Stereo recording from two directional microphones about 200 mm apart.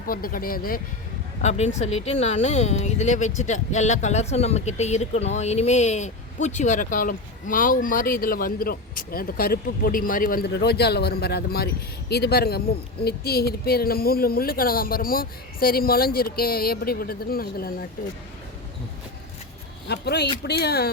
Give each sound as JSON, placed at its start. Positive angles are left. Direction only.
{"t": 0.1, "sound": "speech", "side_deg": 45}
{"t": 1.4, "sound": "speech", "side_deg": 35}
{"t": 19.9, "sound": "speech", "side_deg": 55}